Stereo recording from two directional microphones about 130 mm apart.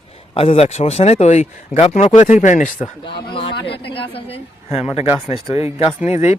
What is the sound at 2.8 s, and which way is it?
A man's voice, 40° left (ahead or behind).